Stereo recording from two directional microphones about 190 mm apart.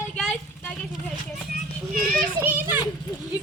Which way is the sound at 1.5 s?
50° right (ahead or behind).